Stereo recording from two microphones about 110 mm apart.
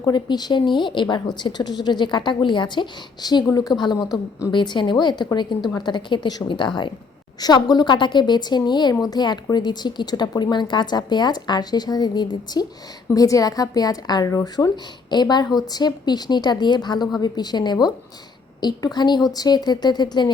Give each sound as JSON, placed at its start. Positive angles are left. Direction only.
{"t": 0.0, "sound": "a woman's voice", "side_deg": 40}